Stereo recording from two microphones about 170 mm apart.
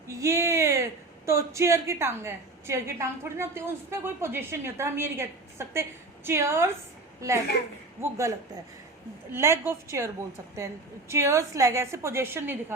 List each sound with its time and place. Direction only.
0.1 s a woman's voice: 20° right (ahead or behind)
9.3 s a woman's voice: 15° right (ahead or behind)
11.1 s a woman's voice: 15° right (ahead or behind)